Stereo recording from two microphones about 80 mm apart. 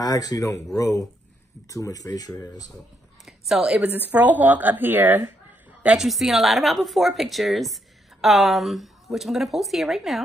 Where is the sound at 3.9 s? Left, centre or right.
Right.